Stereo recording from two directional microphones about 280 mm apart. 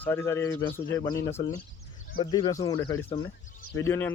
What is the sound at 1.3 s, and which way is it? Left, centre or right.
Speech, left.